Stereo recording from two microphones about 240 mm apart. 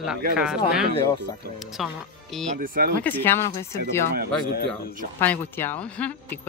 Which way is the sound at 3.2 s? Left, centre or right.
Centre.